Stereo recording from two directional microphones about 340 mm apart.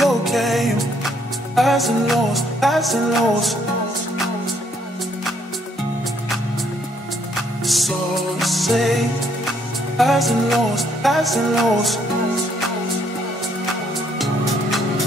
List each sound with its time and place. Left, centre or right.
0.0 s music: centre
7.6 s music: centre
14.1 s music: centre